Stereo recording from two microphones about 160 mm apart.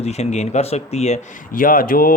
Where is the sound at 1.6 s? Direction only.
65° left (ahead or behind).